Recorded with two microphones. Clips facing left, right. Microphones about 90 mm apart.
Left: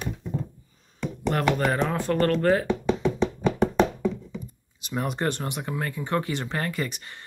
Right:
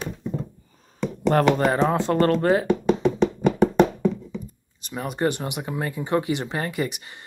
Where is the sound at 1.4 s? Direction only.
25° right (ahead or behind).